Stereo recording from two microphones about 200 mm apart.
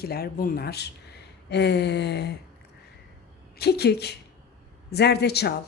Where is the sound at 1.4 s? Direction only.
55° left (ahead or behind).